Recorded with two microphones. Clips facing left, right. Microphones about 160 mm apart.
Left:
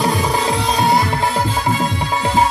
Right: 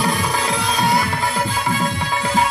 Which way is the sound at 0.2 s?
25° left (ahead or behind).